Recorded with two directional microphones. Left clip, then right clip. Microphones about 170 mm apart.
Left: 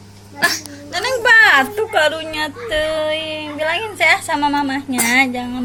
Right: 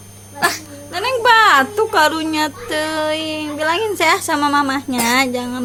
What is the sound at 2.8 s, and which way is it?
A woman's voice, 35° right (ahead or behind).